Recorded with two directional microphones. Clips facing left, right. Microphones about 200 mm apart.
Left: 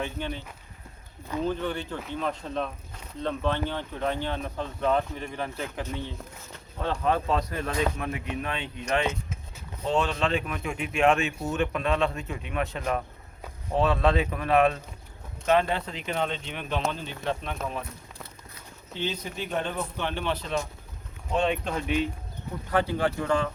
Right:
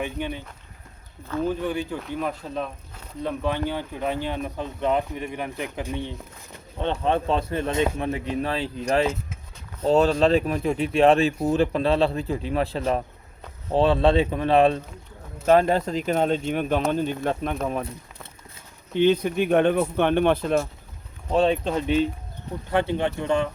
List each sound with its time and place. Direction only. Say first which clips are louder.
0.0 s speech: right 3 dB; 15° right (ahead or behind)
1.5 s speech: right 4 dB; 10° right (ahead or behind)
6.7 s speech: right 3 dB; 25° right (ahead or behind)
15.4 s speech: right 6 dB; 40° right (ahead or behind)
18.9 s speech: right 13 dB; 60° right (ahead or behind)
21.2 s speech: right 6 dB; 35° right (ahead or behind)
22.7 s speech: right 2 dB; 25° right (ahead or behind)